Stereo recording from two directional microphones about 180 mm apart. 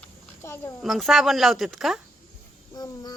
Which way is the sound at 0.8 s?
Centre (ahead or behind).